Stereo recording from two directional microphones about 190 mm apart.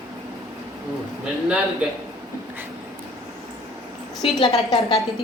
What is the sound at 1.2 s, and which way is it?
Speech, 5° right (ahead or behind).